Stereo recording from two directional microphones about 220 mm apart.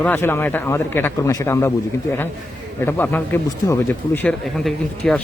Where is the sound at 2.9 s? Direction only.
10° left (ahead or behind).